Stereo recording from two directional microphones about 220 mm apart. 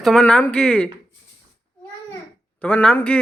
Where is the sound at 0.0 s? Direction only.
Centre (ahead or behind).